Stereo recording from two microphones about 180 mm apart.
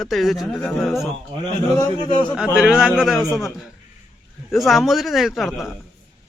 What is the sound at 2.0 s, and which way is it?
Speech, 25° left (ahead or behind).